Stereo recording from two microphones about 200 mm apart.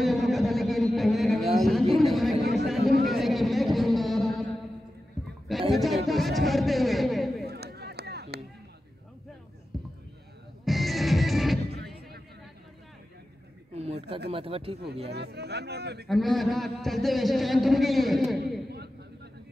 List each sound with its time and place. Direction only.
0.0 s a sound: centre (ahead or behind)
2.8 s a sound: 50° right (ahead or behind)
3.1 s music: centre (ahead or behind)
5.7 s music: centre (ahead or behind)
7.4 s run: 55° right (ahead or behind)
10.6 s music: centre (ahead or behind)
13.7 s a sound: 30° right (ahead or behind)
14.3 s speech: 30° right (ahead or behind)
15.0 s speech: 55° right (ahead or behind)
16.1 s a man's voice: centre (ahead or behind)